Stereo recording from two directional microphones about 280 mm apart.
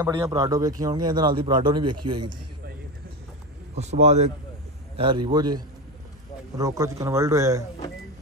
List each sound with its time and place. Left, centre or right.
0.0 s a man's voice: centre
3.7 s a man's voice: right